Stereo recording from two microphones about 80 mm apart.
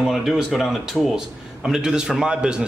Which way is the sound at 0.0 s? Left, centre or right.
Centre.